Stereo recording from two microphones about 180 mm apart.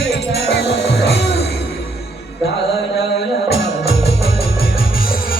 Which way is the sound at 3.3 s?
65° left (ahead or behind).